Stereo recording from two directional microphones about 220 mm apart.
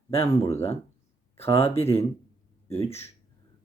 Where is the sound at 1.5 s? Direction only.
25° left (ahead or behind).